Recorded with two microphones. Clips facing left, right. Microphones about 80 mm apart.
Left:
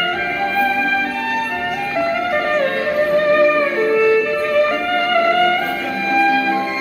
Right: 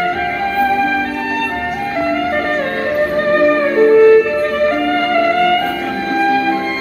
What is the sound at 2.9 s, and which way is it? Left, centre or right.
Music, right.